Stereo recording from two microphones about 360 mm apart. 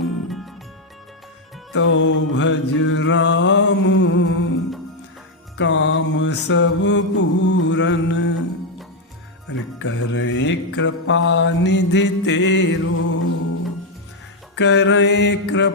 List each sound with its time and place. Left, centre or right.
0.0 s music: centre
1.7 s music: left
9.5 s music: left
14.5 s mantra: left